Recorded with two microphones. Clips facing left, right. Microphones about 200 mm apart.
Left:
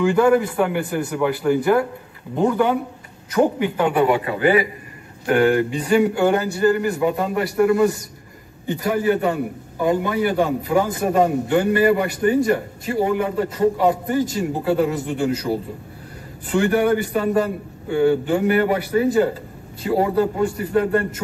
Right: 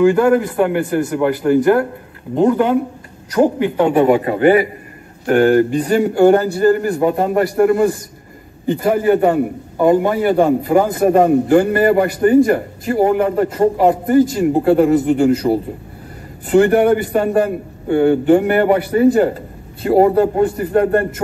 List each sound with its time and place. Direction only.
0.0 s speech: 5° right (ahead or behind)
2.3 s speech: 10° right (ahead or behind)
3.3 s speech: centre (ahead or behind)
3.7 s speech: 25° right (ahead or behind)
4.0 s a man's voice: 45° right (ahead or behind)